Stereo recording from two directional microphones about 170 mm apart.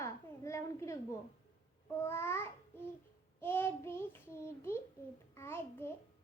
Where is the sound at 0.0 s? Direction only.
15° left (ahead or behind).